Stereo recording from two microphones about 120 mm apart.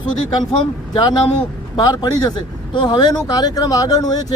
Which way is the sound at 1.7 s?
35° left (ahead or behind).